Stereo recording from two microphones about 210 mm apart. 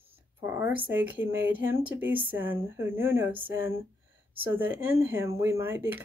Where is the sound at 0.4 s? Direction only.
10° right (ahead or behind).